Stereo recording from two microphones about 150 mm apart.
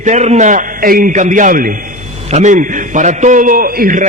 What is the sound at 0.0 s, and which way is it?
A man's voice, 50° right (ahead or behind).